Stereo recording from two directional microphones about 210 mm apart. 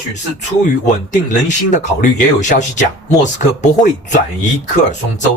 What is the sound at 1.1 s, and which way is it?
Speech, 35° left (ahead or behind).